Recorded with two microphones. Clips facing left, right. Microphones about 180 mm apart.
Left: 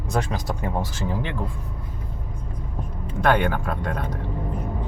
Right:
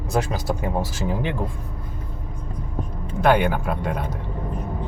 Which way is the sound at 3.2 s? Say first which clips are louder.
Right 2 dB; 5° right (ahead or behind).